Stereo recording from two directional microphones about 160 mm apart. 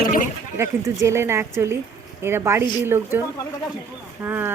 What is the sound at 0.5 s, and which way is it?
A woman's voice, 15° right (ahead or behind).